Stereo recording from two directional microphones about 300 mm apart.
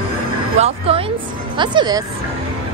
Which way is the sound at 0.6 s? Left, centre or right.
Right.